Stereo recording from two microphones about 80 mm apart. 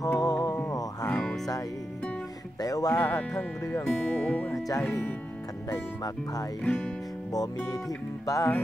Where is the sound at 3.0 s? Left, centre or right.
Centre.